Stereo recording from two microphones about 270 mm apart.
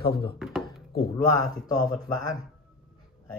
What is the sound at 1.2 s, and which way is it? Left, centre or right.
Speech, centre.